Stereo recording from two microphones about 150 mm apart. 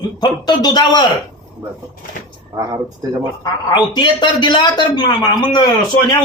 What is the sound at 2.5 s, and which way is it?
Speech, 20° right (ahead or behind).